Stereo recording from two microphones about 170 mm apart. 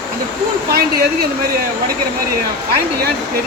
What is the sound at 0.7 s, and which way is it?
Speech, 65° right (ahead or behind).